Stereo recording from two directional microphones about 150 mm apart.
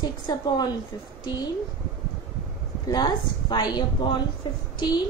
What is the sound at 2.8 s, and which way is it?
A woman's voice, 25° left (ahead or behind).